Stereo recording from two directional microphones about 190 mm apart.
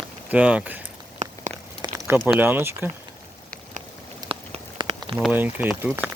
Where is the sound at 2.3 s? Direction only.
10° right (ahead or behind).